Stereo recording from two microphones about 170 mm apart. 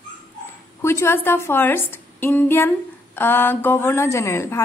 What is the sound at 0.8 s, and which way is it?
Speech, 15° left (ahead or behind).